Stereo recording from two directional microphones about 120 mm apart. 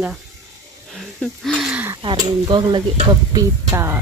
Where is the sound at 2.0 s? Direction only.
30° right (ahead or behind).